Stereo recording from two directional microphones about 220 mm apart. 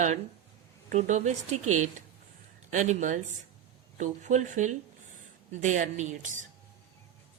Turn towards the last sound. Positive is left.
turn(degrees=-35)  # may be behind; listen again after turning